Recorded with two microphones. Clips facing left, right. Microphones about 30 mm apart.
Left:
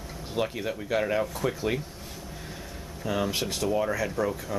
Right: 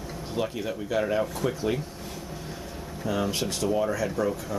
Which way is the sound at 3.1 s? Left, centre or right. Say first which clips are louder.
Even; centre.